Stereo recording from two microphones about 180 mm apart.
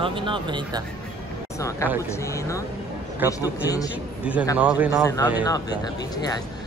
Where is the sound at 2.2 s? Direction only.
15° left (ahead or behind).